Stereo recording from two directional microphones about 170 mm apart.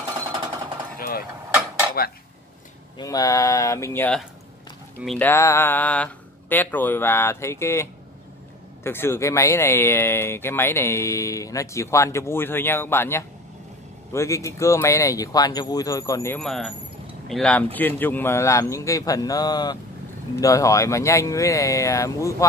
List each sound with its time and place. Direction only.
0.9 s a sound: 60° left (ahead or behind)
3.0 s speech: 20° left (ahead or behind); by 5.3 s 5° left (ahead or behind)
5.3 s speech: 15° left (ahead or behind)
16.3 s speech: centre (ahead or behind); by 22.5 s 20° left (ahead or behind)